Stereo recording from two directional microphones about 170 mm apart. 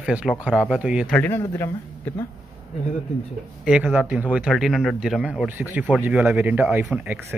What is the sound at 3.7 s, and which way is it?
Speech, 5° right (ahead or behind).